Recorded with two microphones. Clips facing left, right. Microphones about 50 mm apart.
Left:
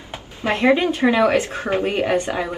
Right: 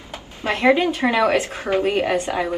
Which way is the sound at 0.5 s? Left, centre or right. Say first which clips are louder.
Even; left.